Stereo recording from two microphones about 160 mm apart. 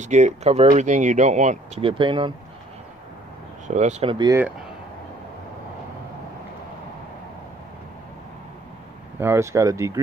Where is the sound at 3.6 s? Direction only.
50° right (ahead or behind).